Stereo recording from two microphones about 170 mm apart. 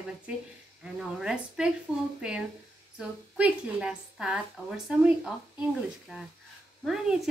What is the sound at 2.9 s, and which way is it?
A woman's voice, 5° right (ahead or behind).